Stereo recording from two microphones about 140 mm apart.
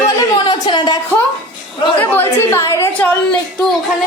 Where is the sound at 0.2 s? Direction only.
30° left (ahead or behind).